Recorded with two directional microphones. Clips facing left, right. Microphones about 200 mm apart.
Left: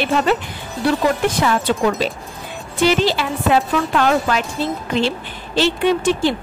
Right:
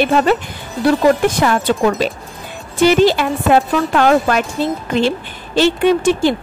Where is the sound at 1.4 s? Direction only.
55° right (ahead or behind).